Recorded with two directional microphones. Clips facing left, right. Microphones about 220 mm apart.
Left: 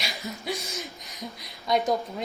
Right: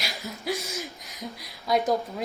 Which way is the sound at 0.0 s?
Centre (ahead or behind).